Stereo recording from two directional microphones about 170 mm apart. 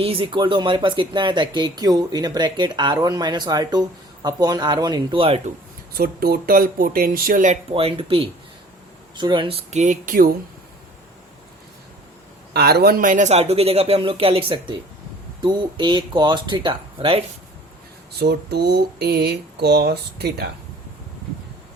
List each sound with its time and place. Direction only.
0.0 s speech: 35° right (ahead or behind)
5.9 s speech: 65° right (ahead or behind)
7.7 s speech: 35° right (ahead or behind); by 10.3 s 55° right (ahead or behind)
12.5 s speech: 70° right (ahead or behind); by 17.2 s 30° right (ahead or behind)
18.2 s speech: 70° right (ahead or behind)